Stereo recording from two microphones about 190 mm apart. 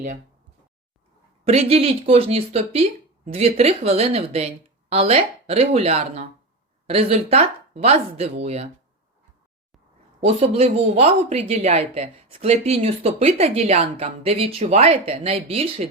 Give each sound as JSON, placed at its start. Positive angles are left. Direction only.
{"t": 1.5, "sound": "speech", "side_deg": -30}
{"t": 10.2, "sound": "speech", "side_deg": -30}